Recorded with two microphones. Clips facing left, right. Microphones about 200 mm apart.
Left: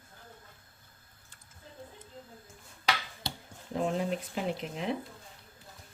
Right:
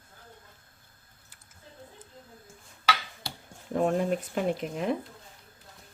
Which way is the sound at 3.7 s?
50° right (ahead or behind).